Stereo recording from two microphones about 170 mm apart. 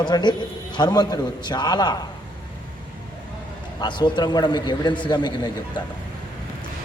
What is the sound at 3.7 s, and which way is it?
A man's voice, 25° left (ahead or behind).